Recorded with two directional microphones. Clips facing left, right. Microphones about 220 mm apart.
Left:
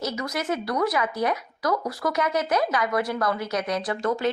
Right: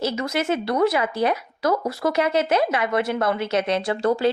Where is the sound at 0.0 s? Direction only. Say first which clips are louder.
Right 5 dB; 25° right (ahead or behind).